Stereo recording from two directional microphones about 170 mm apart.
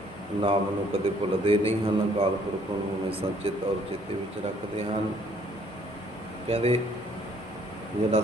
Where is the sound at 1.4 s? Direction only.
35° right (ahead or behind).